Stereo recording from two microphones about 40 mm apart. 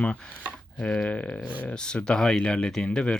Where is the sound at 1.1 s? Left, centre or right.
Left.